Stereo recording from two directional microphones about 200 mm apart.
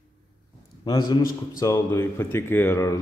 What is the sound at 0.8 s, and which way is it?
Speech, 20° left (ahead or behind).